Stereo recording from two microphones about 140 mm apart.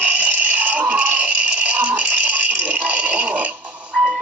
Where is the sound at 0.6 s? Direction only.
10° right (ahead or behind).